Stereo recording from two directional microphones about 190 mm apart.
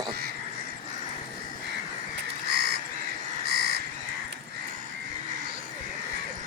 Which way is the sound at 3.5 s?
55° right (ahead or behind).